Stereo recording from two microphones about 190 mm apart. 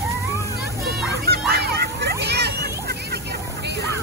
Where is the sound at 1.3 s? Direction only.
55° right (ahead or behind).